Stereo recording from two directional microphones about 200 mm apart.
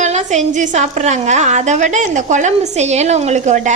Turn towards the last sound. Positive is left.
turn(degrees=-35)  # may be behind; listen again after turning